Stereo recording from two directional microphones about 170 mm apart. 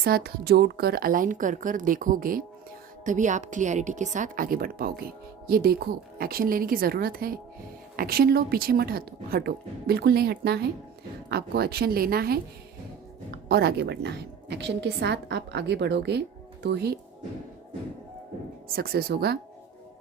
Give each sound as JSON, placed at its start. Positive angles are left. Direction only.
{"t": 0.0, "sound": "a woman's voice", "side_deg": -65}
{"t": 18.7, "sound": "speech", "side_deg": -65}